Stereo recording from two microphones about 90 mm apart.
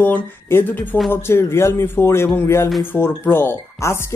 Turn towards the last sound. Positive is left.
turn(degrees=25)  # may be behind; listen again after turning